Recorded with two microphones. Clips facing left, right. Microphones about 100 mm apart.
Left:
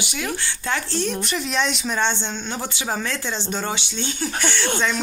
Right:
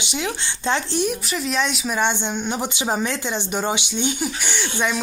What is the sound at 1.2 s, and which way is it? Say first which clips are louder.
Speech: even; centre (ahead or behind).